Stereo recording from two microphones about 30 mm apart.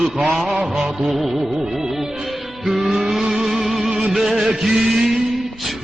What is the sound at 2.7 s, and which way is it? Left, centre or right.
Vehicle, centre.